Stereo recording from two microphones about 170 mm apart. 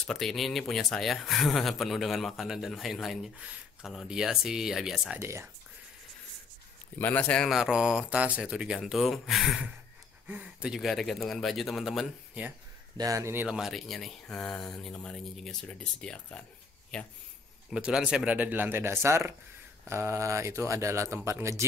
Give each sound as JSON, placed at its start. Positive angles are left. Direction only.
{"t": 0.0, "sound": "speech", "side_deg": 0}
{"t": 5.2, "sound": "speech", "side_deg": -15}
{"t": 7.0, "sound": "speech", "side_deg": 10}
{"t": 12.9, "sound": "speech", "side_deg": -20}
{"t": 17.6, "sound": "speech", "side_deg": -5}